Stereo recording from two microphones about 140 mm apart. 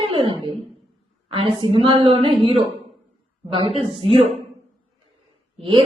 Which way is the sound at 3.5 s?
40° right (ahead or behind).